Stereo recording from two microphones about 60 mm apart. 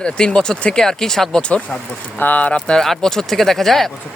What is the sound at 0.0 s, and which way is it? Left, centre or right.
Speech, centre.